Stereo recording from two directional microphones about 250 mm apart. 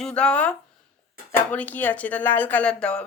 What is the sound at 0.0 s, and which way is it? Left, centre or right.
Speech, centre.